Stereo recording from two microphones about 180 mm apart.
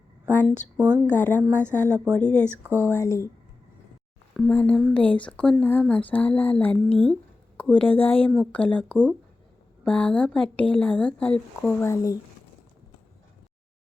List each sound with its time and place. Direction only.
0.3 s speech: 10° left (ahead or behind)
0.8 s speech: 10° right (ahead or behind)
1.1 s speech: 10° left (ahead or behind)
1.4 s speech: 10° right (ahead or behind)
2.1 s speech: 5° left (ahead or behind)
2.5 s speech: 10° right (ahead or behind)
2.9 s speech: 15° left (ahead or behind)
4.4 s speech: 10° left (ahead or behind)